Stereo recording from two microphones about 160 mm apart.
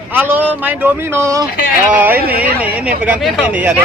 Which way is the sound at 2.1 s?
75° right (ahead or behind).